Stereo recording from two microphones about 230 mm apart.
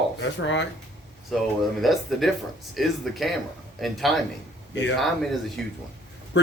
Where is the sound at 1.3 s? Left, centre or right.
Centre.